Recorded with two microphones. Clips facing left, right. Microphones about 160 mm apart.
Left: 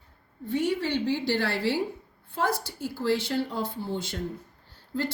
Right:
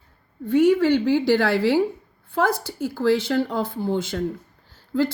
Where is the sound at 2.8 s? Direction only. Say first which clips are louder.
Right 7 dB; 90° right.